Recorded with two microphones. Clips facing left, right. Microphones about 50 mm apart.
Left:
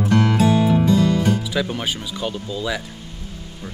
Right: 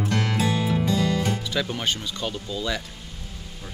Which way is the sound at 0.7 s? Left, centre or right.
Left.